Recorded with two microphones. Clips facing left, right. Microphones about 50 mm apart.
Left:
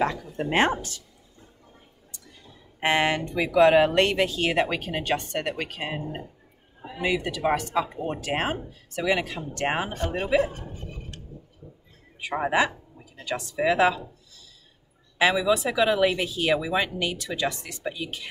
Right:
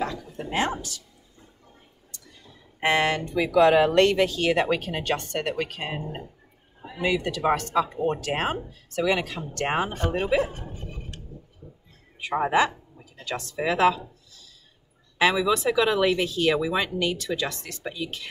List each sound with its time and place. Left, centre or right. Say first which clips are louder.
0.0 s speech: left 4 dB; left
2.8 s speech: even; centre
7.0 s speech: right 1 dB; centre
12.4 s speech: right 1 dB; centre